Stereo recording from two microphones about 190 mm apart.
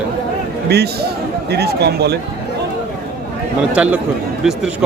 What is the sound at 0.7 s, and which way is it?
Speech, 60° right (ahead or behind).